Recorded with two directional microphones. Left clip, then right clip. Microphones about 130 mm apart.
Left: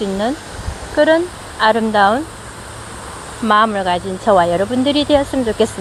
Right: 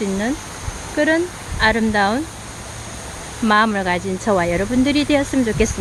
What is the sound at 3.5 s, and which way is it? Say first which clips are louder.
Speech: left 3 dB; 25° right (ahead or behind).